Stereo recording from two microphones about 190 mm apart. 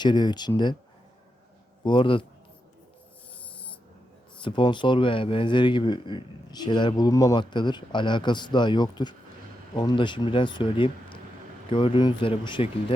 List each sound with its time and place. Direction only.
0.0 s speech: 25° left (ahead or behind)
1.8 s speech: 25° left (ahead or behind)
4.4 s speech: 25° left (ahead or behind)